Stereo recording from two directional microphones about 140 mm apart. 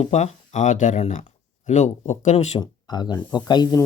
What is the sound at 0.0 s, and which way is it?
Speech, 55° left (ahead or behind).